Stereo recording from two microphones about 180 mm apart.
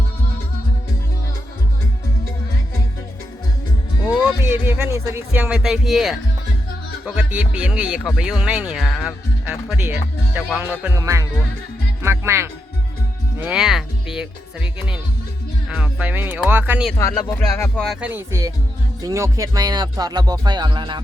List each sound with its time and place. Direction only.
4.2 s speech: 10° right (ahead or behind)
17.0 s speech: 20° left (ahead or behind)
17.6 s speech: 5° left (ahead or behind)
18.0 s speech: 15° right (ahead or behind)